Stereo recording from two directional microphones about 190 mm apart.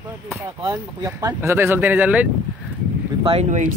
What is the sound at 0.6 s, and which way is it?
Speech, 15° right (ahead or behind).